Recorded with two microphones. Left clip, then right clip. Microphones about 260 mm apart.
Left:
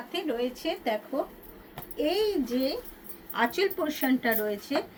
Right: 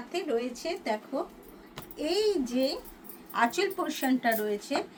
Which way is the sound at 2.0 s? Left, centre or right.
Centre.